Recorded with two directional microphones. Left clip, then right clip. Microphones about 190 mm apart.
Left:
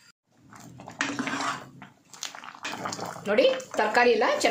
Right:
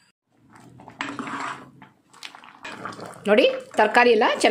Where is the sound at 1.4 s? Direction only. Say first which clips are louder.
Left 1 dB; 15° left (ahead or behind).